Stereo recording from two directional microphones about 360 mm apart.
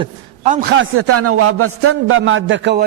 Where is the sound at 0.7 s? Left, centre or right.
Right.